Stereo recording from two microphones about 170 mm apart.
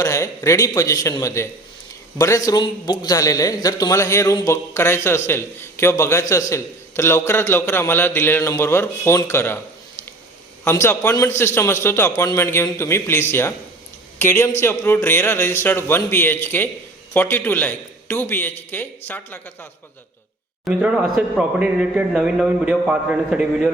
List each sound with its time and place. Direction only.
0.0 s a man's voice: 20° left (ahead or behind)
10.6 s a man's voice: 15° left (ahead or behind)
20.7 s speech: 5° right (ahead or behind)